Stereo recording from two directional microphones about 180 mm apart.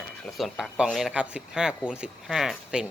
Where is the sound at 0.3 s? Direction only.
Centre (ahead or behind).